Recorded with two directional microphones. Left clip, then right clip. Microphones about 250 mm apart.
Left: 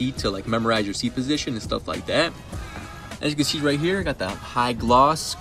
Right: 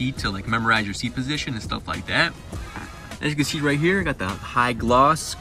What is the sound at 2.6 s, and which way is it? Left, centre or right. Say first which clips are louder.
Music: right 1 dB; right.